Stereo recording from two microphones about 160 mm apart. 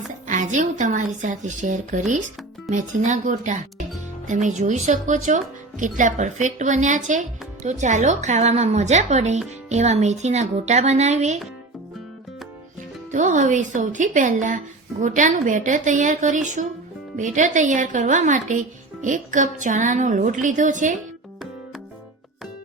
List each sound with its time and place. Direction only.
0.3 s speech: 50° right (ahead or behind)
13.1 s speech: 50° right (ahead or behind)